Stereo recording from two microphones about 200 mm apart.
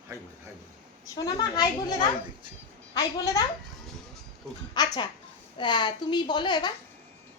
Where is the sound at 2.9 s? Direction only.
20° left (ahead or behind).